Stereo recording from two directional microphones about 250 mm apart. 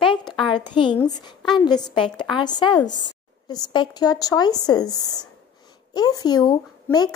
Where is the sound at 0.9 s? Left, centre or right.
Centre.